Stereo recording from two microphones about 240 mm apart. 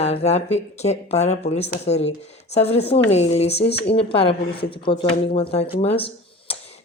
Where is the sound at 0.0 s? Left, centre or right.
Left.